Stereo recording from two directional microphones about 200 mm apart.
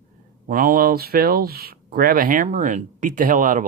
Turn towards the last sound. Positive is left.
turn(degrees=-40)  # may be behind; listen again after turning